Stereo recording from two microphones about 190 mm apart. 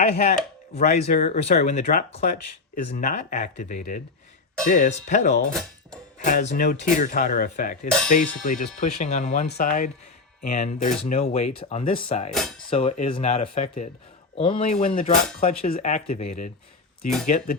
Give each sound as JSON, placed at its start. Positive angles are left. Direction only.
{"t": 0.0, "sound": "speech", "side_deg": 35}
{"t": 5.5, "sound": "speech", "side_deg": 5}
{"t": 6.1, "sound": "speech", "side_deg": 40}
{"t": 12.3, "sound": "speech", "side_deg": 0}
{"t": 12.7, "sound": "speech", "side_deg": 30}